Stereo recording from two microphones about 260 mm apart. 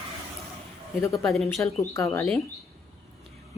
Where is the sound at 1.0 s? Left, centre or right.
Centre.